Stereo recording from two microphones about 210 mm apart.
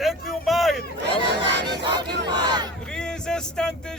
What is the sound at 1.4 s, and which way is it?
Battle cry, 55° right (ahead or behind).